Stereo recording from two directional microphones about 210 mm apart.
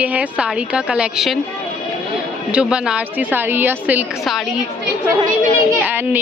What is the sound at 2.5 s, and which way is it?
A woman's voice, 5° right (ahead or behind).